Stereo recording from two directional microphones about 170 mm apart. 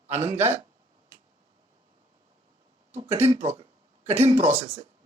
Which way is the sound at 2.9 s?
40° right (ahead or behind).